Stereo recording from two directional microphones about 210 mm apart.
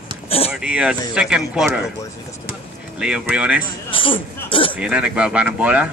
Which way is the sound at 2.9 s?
5° right (ahead or behind).